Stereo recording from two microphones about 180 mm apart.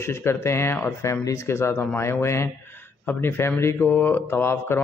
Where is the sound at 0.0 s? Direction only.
15° left (ahead or behind).